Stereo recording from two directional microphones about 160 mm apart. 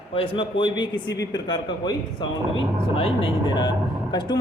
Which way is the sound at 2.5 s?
35° left (ahead or behind).